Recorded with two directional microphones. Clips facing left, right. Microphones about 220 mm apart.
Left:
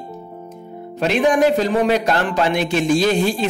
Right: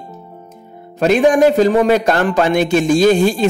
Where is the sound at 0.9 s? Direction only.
45° right (ahead or behind).